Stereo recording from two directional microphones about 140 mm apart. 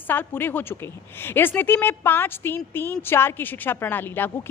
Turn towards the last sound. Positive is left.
turn(degrees=15)  # may be behind; listen again after turning